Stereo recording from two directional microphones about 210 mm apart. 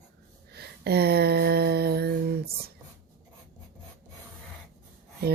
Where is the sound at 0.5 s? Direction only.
50° right (ahead or behind).